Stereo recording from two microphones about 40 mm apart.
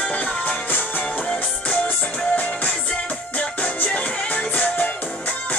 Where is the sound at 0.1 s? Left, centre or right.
Left.